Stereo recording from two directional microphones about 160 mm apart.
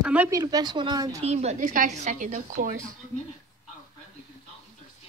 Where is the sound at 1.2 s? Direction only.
45° right (ahead or behind).